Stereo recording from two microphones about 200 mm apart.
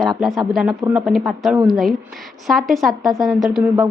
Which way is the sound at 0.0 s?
Centre (ahead or behind).